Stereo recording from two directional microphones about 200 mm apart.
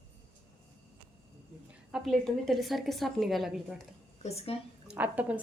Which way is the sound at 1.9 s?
Centre (ahead or behind).